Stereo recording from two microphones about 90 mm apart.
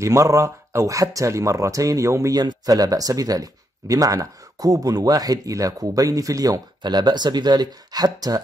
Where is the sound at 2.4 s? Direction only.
45° right (ahead or behind).